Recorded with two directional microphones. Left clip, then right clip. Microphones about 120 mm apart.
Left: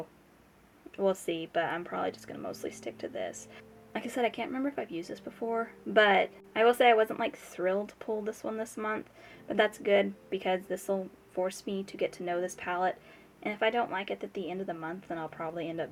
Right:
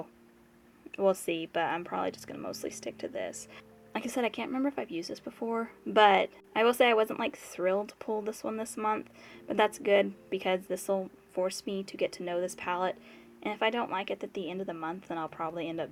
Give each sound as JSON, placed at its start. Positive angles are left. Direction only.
{"t": 0.9, "sound": "speech", "side_deg": -35}
{"t": 5.9, "sound": "speech", "side_deg": -40}